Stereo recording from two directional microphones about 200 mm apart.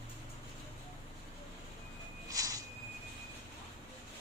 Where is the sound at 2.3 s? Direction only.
15° right (ahead or behind).